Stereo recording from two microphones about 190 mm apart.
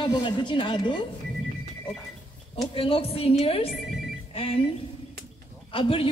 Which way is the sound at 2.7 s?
30° left (ahead or behind).